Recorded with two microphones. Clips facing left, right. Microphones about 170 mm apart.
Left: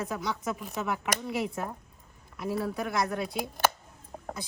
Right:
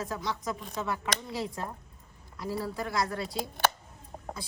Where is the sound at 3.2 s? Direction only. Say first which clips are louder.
Left 2 dB; 15° left (ahead or behind).